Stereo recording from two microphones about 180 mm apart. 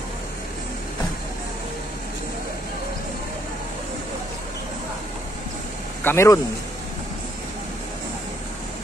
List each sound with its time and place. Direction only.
6.0 s speech: 15° left (ahead or behind)